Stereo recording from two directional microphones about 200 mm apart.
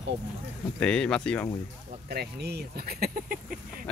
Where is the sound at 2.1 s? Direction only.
55° right (ahead or behind).